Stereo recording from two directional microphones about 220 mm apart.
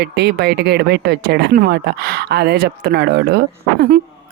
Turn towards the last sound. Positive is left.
turn(degrees=-50)  # may be behind; listen again after turning